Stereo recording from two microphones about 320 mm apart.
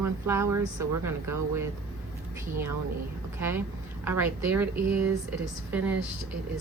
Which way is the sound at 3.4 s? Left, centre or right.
Centre.